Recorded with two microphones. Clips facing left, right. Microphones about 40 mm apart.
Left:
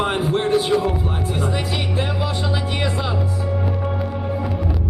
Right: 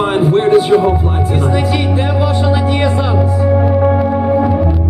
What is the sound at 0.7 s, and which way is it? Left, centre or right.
Speech, right.